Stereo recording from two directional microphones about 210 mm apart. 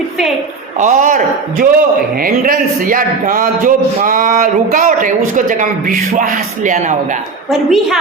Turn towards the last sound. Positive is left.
turn(degrees=0)  # may be behind; listen again after turning